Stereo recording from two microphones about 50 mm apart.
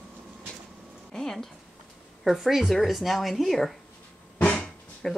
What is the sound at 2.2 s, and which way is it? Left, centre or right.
Speech, centre.